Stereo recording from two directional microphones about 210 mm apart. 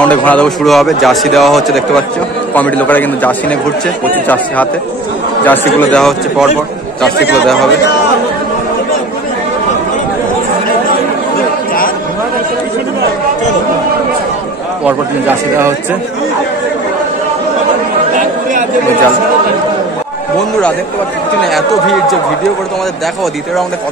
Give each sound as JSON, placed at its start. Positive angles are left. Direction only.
{"t": 0.0, "sound": "a man's voice", "side_deg": 5}
{"t": 5.4, "sound": "a man's voice", "side_deg": 10}
{"t": 7.2, "sound": "speech", "side_deg": 55}
{"t": 14.9, "sound": "speech", "side_deg": -10}
{"t": 21.4, "sound": "a man's voice", "side_deg": 0}